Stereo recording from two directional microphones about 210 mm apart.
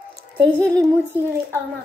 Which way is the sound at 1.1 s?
10° right (ahead or behind).